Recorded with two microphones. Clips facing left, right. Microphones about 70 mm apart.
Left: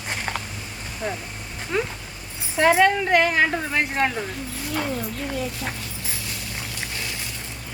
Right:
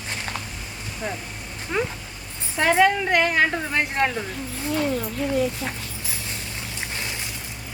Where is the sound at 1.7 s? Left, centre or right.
Centre.